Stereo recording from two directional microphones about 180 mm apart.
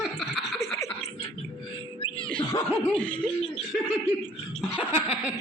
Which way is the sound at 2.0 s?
30° left (ahead or behind).